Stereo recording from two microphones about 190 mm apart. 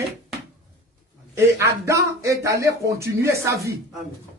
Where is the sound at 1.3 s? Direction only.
15° right (ahead or behind).